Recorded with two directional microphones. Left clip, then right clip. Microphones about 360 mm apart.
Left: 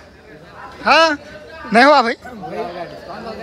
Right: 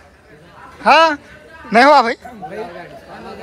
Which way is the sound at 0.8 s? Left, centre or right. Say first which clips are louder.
Right 2 dB; centre.